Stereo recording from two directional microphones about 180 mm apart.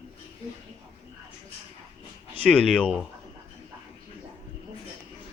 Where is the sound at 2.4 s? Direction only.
5° left (ahead or behind).